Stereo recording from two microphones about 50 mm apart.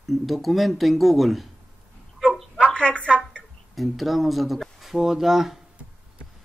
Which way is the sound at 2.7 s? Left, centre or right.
Left.